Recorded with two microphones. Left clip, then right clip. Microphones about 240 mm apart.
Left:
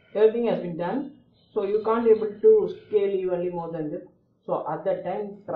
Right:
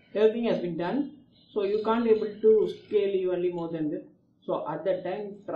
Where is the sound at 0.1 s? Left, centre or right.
Right.